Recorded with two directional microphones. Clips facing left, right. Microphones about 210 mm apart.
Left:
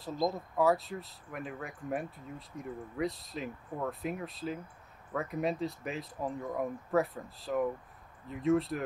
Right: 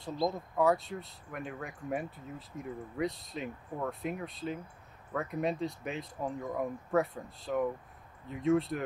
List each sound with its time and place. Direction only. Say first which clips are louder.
0.3 s speech: even; centre (ahead or behind)